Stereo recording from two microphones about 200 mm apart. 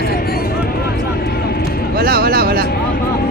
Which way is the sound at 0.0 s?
50° left (ahead or behind).